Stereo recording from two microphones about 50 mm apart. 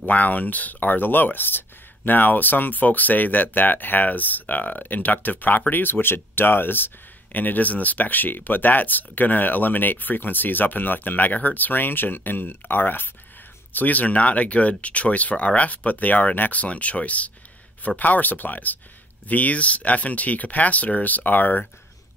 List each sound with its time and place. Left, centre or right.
0.0 s speech: left